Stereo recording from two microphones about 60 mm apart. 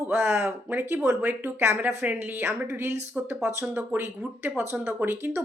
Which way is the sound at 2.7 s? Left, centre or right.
Right.